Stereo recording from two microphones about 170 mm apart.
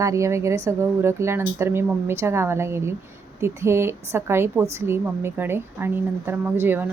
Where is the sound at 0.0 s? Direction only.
20° right (ahead or behind).